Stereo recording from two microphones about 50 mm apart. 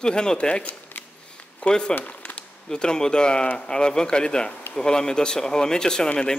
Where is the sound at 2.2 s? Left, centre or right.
Left.